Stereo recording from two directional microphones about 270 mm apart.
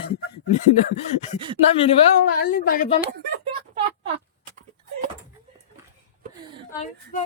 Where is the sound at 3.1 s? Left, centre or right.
Centre.